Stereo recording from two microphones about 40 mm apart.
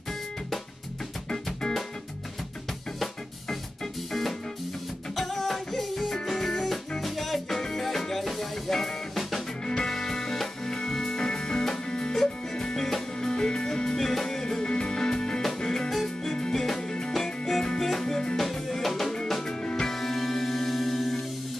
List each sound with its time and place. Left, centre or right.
4.1 s music: centre
19.4 s music: left
19.9 s music: centre